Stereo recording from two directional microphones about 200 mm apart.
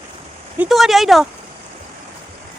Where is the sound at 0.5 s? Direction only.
5° right (ahead or behind).